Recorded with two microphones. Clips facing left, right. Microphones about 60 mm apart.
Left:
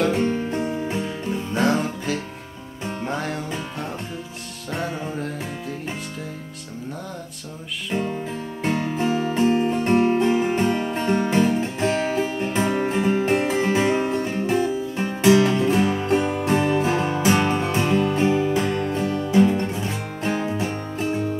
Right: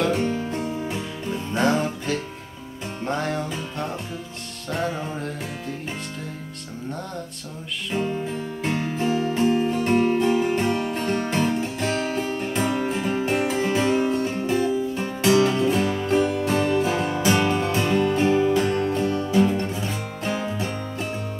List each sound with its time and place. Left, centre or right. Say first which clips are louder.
0.3 s music: left 2 dB; left
1.5 s music: even; centre
7.9 s music: even; centre
13.9 s music: even; left
17.6 s music: left 1 dB; centre